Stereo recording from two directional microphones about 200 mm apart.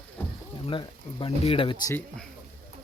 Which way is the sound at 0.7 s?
25° left (ahead or behind).